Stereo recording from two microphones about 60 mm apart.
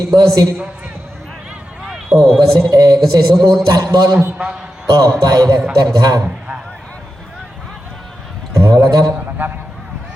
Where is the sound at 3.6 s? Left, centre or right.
Right.